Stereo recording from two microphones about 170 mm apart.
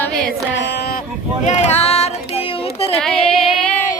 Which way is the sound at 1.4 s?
40° left (ahead or behind).